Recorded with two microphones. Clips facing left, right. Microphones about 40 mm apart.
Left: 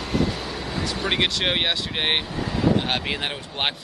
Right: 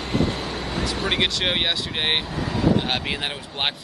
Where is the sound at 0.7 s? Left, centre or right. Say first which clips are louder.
Even; centre.